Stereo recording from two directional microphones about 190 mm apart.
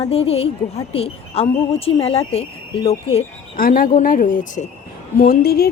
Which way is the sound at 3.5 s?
50° left (ahead or behind).